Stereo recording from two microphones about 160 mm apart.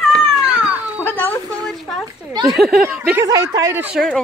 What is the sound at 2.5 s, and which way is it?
Speech, centre (ahead or behind).